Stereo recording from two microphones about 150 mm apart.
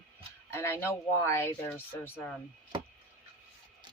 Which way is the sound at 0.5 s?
15° left (ahead or behind).